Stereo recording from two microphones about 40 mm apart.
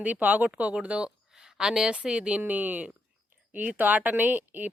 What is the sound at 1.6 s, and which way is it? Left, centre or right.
A woman's voice, centre.